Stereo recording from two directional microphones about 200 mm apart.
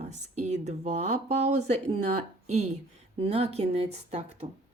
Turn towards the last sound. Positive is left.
turn(degrees=-30)  # may be behind; listen again after turning